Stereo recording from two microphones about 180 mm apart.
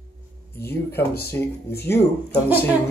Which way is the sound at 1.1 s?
60° left (ahead or behind).